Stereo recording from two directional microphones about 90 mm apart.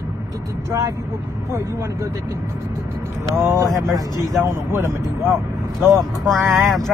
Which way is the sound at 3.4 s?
35° right (ahead or behind).